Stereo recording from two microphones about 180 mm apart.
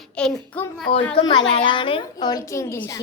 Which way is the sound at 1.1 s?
25° left (ahead or behind).